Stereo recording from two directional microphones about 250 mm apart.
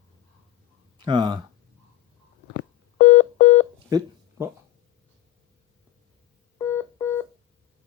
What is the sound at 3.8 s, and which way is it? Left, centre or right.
Telephone dialing, centre.